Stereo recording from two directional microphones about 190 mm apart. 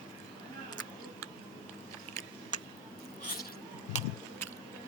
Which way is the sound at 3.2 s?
50° left (ahead or behind).